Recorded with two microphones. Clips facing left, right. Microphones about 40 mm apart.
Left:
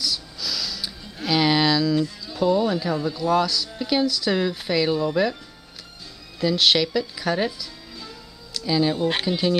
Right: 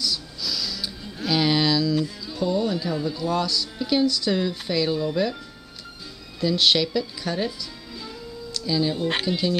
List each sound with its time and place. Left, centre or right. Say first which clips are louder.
0.0 s a sound: even; centre
2.0 s music: right 1 dB; centre
2.4 s speech: left 3 dB; centre
6.4 s speech: left 1 dB; centre
8.6 s speech: left 3 dB; centre